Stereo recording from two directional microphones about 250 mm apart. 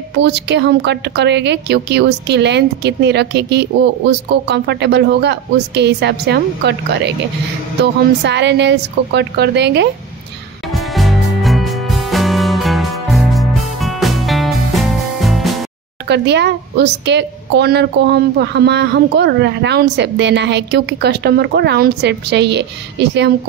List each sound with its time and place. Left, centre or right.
0.2 s a woman's voice: right
10.7 s music: centre
16.1 s a woman's voice: right